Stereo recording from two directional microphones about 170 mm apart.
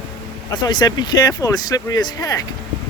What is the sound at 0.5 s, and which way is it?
Speech, 25° left (ahead or behind).